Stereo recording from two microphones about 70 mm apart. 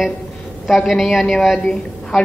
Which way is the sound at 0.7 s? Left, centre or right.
Centre.